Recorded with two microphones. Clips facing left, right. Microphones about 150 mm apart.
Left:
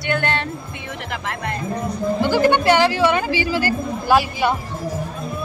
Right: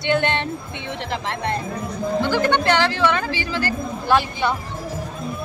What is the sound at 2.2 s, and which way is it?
A woman's voice, 10° left (ahead or behind).